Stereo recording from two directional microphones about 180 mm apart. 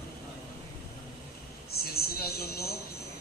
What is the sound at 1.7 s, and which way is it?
Speech, 60° left (ahead or behind).